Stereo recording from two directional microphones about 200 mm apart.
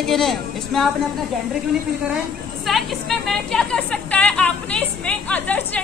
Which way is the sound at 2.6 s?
Centre (ahead or behind).